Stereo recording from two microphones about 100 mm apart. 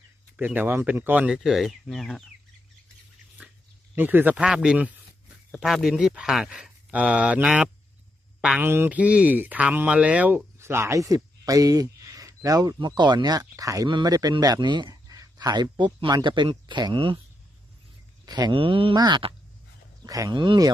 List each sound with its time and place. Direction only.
0.3 s speech: 15° right (ahead or behind)
1.4 s speech: centre (ahead or behind)
3.9 s speech: 20° right (ahead or behind)
8.6 s speech: 20° right (ahead or behind)
10.6 s speech: 25° right (ahead or behind)
13.8 s a man's voice: 45° right (ahead or behind)
18.3 s speech: 40° right (ahead or behind)
18.5 s speech: 60° right (ahead or behind)
18.9 s speech: 45° right (ahead or behind)
20.3 s speech: 50° right (ahead or behind)